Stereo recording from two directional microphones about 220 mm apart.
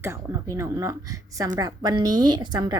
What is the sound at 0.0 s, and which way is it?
A woman's voice, 10° right (ahead or behind).